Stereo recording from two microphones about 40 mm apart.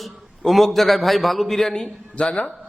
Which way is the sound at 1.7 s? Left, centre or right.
Left.